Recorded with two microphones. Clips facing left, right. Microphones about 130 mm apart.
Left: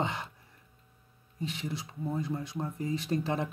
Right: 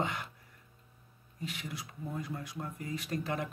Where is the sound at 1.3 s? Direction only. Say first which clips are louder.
Left 5 dB; 25° left (ahead or behind).